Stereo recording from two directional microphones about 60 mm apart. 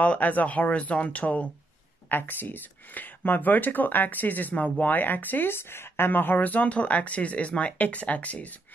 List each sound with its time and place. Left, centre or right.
0.0 s speech: left